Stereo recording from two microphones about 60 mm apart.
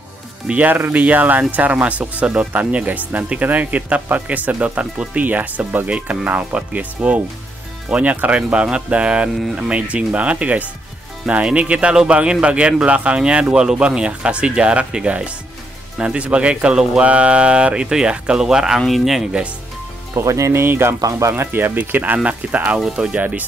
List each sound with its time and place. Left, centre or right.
0.5 s speech: right; by 19.2 s centre
20.2 s speech: right
21.0 s speech: right